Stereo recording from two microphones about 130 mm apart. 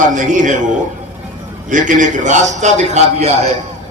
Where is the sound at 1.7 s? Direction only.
75° right (ahead or behind); by 3.3 s 55° right (ahead or behind).